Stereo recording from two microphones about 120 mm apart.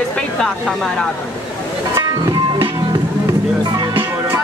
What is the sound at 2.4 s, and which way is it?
Music, 45° right (ahead or behind).